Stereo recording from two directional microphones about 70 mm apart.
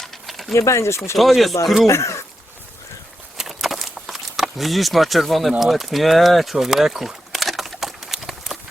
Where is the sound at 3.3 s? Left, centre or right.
Centre.